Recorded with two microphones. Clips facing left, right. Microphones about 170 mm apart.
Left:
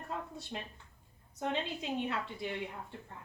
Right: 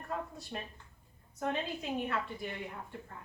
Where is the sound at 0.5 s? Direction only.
15° left (ahead or behind).